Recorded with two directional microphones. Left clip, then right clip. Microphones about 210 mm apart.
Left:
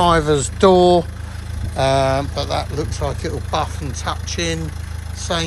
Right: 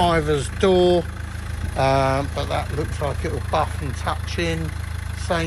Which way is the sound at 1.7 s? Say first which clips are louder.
Left 3 dB; centre (ahead or behind).